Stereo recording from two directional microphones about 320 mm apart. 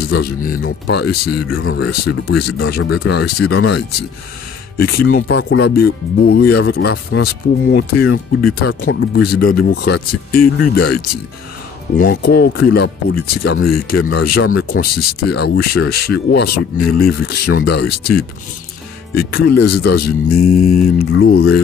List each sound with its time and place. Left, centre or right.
0.1 s speech: left
1.3 s speech: left
12.0 s speech: left
19.5 s speech: left